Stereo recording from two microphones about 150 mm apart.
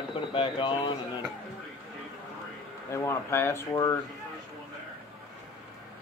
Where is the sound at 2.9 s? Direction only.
15° left (ahead or behind).